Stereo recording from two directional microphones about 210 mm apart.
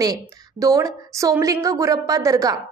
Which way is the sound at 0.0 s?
15° right (ahead or behind).